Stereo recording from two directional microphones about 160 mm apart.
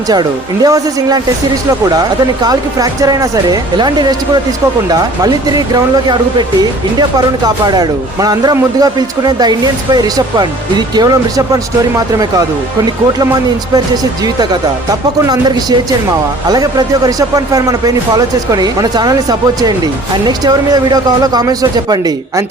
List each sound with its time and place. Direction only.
0.1 s speech: 25° right (ahead or behind)
7.2 s speech: 25° right (ahead or behind)
13.7 s speech: 25° right (ahead or behind)